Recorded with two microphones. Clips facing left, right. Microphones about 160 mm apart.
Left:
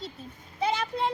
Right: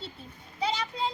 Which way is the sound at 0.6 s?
55° left (ahead or behind).